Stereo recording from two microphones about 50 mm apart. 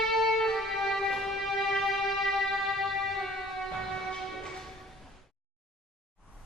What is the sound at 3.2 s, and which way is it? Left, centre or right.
Music, centre.